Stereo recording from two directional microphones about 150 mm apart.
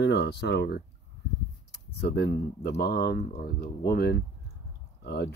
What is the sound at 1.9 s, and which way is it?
Speech, 90° left.